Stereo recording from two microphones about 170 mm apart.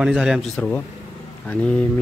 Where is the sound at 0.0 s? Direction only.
5° right (ahead or behind).